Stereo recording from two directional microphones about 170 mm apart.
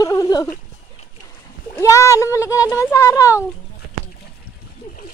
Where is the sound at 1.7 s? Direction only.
20° left (ahead or behind).